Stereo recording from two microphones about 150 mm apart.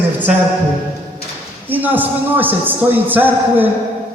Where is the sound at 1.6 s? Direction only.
10° right (ahead or behind).